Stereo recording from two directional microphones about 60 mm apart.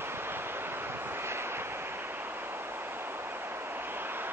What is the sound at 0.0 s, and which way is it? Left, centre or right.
Vehicle, right.